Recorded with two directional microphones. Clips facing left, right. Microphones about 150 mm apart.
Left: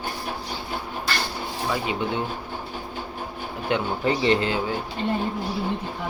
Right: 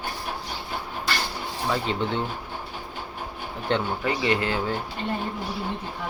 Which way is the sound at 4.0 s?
25° left (ahead or behind).